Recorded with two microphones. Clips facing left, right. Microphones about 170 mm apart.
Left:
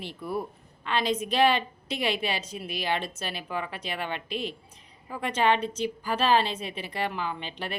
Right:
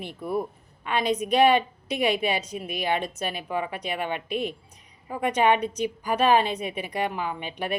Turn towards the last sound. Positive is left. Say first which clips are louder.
# right 3 dB
turn(degrees=-15)  # may be behind; listen again after turning